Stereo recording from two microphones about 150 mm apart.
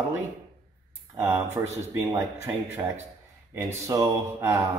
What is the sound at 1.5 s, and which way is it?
Speech, 20° right (ahead or behind).